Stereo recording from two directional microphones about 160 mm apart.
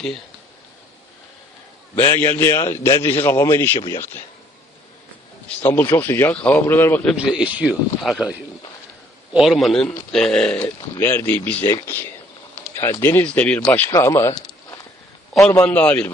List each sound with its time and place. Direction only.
2.0 s a man's voice: 15° left (ahead or behind)
5.5 s a man's voice: 10° left (ahead or behind)
7.3 s a man's voice: 5° right (ahead or behind); by 14.8 s 20° left (ahead or behind)
15.3 s a man's voice: 10° left (ahead or behind)